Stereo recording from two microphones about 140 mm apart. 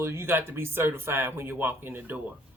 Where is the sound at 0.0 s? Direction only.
20° right (ahead or behind).